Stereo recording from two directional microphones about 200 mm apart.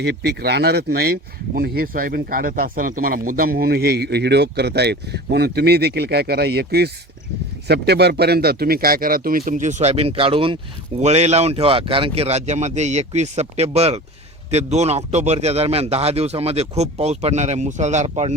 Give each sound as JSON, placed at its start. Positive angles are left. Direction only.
{"t": 0.0, "sound": "speech", "side_deg": -55}